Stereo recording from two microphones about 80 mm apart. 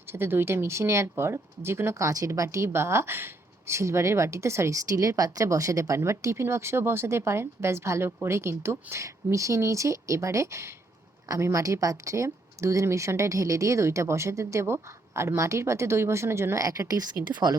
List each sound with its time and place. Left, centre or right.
0.0 s speech: right
16.6 s speech: right